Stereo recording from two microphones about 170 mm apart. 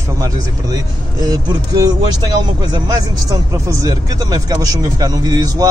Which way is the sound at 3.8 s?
20° right (ahead or behind).